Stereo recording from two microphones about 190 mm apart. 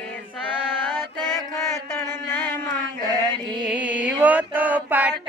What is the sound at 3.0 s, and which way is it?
Mantra, 20° right (ahead or behind).